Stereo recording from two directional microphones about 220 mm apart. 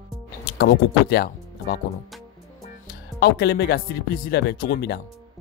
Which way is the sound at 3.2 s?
45° left (ahead or behind).